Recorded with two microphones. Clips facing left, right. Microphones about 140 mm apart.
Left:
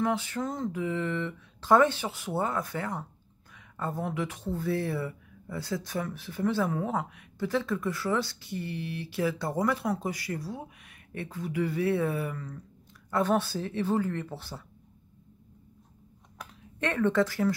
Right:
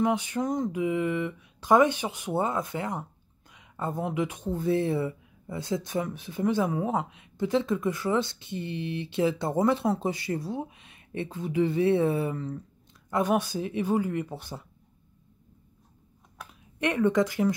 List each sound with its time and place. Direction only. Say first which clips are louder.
0.0 s speech: right 3 dB; 20° right (ahead or behind)
13.1 s speech: right 1 dB; 15° right (ahead or behind)
16.8 s speech: right 2 dB; 15° right (ahead or behind)